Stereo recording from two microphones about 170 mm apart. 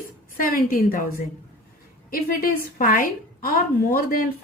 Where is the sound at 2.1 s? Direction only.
60° left (ahead or behind).